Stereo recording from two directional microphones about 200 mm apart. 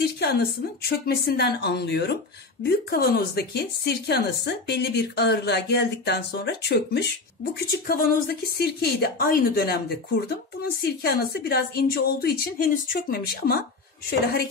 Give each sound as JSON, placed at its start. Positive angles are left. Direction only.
{"t": 0.2, "sound": "a woman's voice", "side_deg": 55}